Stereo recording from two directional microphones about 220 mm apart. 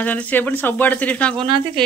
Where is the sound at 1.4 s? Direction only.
20° right (ahead or behind).